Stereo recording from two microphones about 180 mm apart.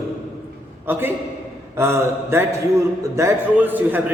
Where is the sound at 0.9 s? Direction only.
10° right (ahead or behind).